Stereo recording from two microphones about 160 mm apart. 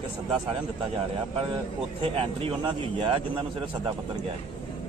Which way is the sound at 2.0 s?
35° right (ahead or behind).